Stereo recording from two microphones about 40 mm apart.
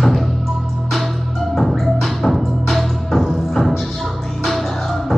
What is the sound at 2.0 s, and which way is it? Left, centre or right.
Music, centre.